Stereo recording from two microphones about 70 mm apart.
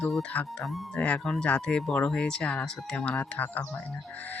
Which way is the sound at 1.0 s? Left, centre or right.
Centre.